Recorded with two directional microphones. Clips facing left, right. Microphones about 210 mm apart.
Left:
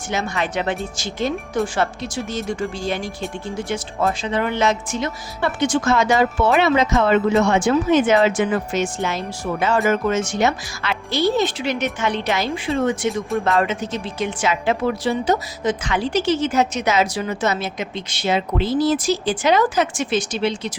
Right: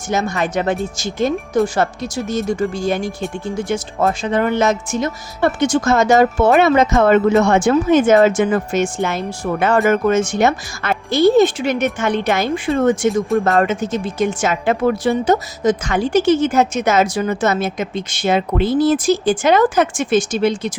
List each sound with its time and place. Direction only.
0.1 s speech: 45° right (ahead or behind)